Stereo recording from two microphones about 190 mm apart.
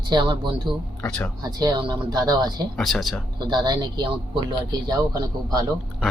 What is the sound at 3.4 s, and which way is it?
Speech, 20° right (ahead or behind).